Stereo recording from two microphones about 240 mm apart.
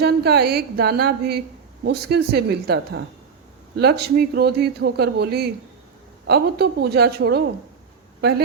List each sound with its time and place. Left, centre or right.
0.0 s a woman's voice: right